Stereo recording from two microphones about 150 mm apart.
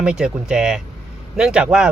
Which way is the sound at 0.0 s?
5° right (ahead or behind).